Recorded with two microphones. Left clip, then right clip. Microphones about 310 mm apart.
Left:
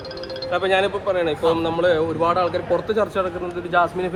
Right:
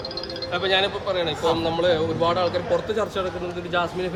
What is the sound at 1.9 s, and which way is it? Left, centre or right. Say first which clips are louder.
A man's voice: left 2 dB; centre.